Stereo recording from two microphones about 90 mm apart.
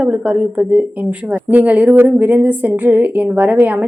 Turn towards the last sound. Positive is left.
turn(degrees=-15)  # may be behind; listen again after turning